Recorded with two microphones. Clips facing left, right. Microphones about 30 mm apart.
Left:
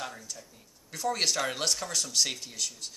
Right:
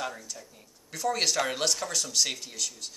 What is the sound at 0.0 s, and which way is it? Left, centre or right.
Speech, centre.